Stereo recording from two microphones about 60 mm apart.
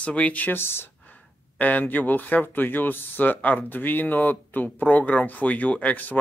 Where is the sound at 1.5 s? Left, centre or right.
Left.